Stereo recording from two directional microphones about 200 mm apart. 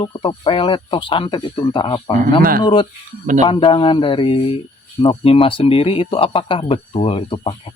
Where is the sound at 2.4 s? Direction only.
45° right (ahead or behind).